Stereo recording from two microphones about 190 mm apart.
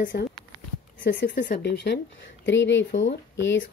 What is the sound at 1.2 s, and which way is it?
Speech, 65° left (ahead or behind).